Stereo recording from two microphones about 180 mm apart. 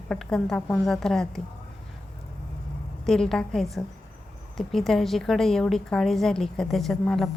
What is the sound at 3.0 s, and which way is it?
A woman's voice, centre (ahead or behind).